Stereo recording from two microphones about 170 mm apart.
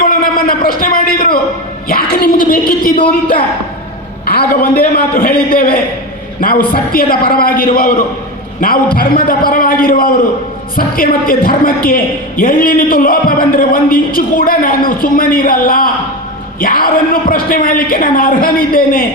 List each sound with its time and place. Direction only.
0.0 s a sound: 55° left (ahead or behind)
1.9 s a man's voice: 60° left (ahead or behind)
9.0 s a man's voice: 60° left (ahead or behind)